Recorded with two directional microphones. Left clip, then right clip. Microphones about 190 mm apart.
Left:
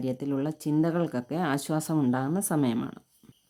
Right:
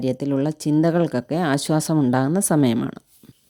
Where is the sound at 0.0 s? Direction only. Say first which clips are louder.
Right 8 dB; 30° right (ahead or behind).